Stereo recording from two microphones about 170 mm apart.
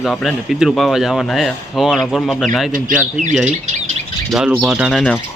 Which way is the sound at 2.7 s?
50° right (ahead or behind).